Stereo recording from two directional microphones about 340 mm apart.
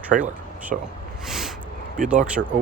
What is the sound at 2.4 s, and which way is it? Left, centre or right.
Speech, right.